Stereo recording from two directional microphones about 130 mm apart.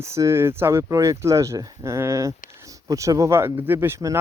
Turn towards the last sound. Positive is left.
turn(degrees=-20)  # may be behind; listen again after turning